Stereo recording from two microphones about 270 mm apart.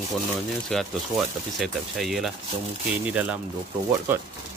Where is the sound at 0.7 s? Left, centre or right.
Centre.